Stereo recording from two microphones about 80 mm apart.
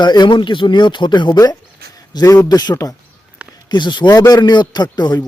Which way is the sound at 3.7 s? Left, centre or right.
Left.